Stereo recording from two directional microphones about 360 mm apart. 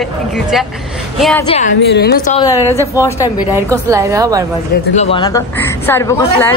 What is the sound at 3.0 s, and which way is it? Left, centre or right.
Speech, centre.